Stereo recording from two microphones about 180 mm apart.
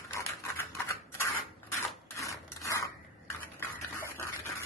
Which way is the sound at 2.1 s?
15° left (ahead or behind).